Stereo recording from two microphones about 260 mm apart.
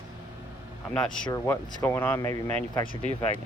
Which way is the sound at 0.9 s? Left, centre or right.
Centre.